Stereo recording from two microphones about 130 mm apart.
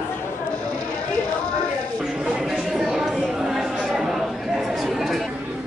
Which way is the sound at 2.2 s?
5° right (ahead or behind).